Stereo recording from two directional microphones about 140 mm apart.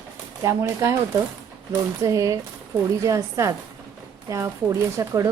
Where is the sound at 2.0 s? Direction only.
25° right (ahead or behind).